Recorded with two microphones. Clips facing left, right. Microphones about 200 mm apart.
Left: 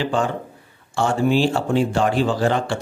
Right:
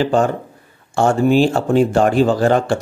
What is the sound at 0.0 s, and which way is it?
Speech, 45° right (ahead or behind).